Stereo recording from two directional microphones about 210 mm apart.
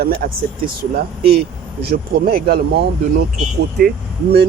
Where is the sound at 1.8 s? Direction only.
45° right (ahead or behind).